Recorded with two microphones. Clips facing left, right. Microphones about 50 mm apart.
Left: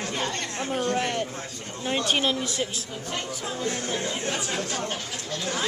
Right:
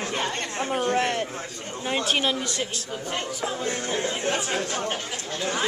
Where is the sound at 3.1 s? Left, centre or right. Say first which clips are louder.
Right 2 dB; centre.